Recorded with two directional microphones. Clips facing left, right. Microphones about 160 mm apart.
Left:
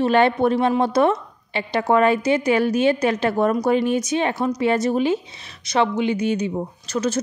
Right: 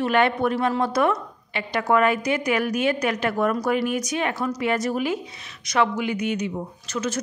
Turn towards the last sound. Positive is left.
turn(degrees=35)  # may be behind; listen again after turning